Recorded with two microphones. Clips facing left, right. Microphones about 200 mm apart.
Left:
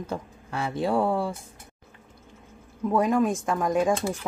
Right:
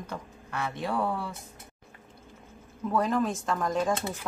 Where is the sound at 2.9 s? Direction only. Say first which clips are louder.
Left 4 dB; 15° left (ahead or behind).